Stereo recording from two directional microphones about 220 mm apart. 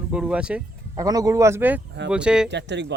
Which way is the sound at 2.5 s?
50° right (ahead or behind).